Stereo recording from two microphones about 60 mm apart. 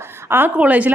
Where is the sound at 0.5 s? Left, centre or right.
Right.